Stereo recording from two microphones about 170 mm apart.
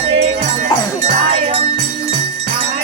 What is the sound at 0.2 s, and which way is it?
Music, 40° right (ahead or behind).